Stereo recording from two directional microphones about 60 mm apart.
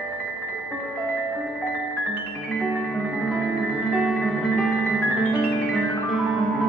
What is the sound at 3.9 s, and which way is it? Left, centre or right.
Music, centre.